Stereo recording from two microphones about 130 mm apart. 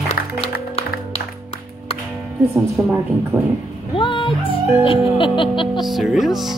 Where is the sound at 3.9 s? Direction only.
40° left (ahead or behind).